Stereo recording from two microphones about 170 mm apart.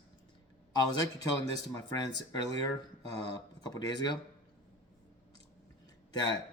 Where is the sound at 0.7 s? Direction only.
25° left (ahead or behind).